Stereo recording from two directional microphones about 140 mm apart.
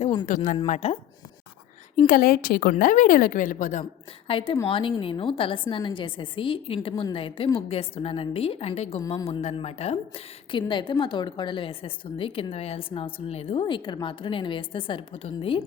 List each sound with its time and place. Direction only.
0.3 s a woman's voice: 65° left (ahead or behind)
0.7 s speech: 50° left (ahead or behind)
2.0 s a woman's voice: 85° left; by 3.8 s 65° left (ahead or behind)
4.3 s a woman's voice: 40° left (ahead or behind)
9.0 s a woman's voice: 30° left (ahead or behind)
9.2 s a woman's voice: 45° left (ahead or behind)